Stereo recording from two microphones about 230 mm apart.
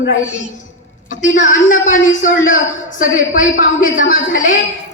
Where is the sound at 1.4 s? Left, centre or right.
Left.